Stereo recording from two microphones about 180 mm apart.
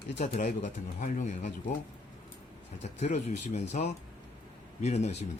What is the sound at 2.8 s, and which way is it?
Speech, 40° left (ahead or behind).